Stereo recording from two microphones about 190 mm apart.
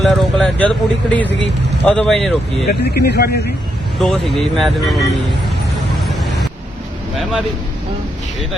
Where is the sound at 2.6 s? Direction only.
60° left (ahead or behind).